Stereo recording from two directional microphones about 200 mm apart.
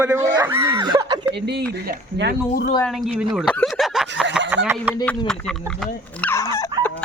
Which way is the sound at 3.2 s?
5° right (ahead or behind).